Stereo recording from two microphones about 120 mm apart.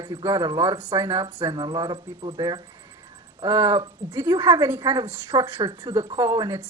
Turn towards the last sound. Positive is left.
turn(degrees=-25)  # may be behind; listen again after turning